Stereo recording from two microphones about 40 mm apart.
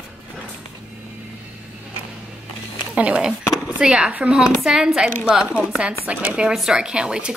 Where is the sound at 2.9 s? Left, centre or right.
Right.